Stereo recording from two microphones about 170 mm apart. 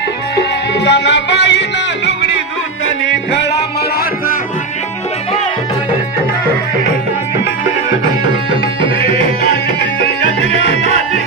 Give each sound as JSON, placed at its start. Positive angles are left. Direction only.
{"t": 0.4, "sound": "music", "side_deg": 90}